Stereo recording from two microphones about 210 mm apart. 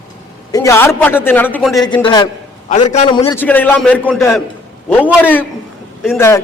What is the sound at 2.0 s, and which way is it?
A man's voice, 20° left (ahead or behind).